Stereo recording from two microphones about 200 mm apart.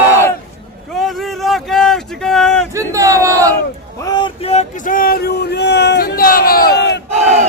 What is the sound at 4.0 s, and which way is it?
Speech, 20° left (ahead or behind).